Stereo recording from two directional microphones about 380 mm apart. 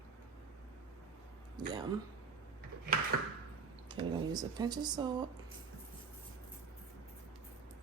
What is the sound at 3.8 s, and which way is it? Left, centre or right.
Speech, centre.